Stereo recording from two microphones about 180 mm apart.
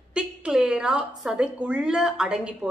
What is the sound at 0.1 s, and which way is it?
A woman's voice, 5° right (ahead or behind).